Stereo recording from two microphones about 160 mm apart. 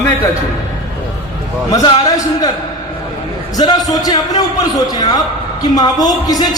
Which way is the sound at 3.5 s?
25° left (ahead or behind).